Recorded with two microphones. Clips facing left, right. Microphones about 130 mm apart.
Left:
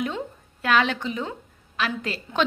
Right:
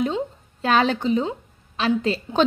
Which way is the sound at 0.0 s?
30° right (ahead or behind).